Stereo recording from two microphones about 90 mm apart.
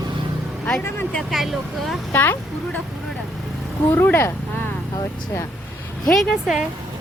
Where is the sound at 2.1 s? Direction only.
20° left (ahead or behind).